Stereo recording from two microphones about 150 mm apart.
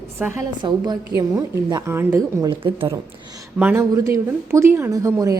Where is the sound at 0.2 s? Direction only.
10° right (ahead or behind).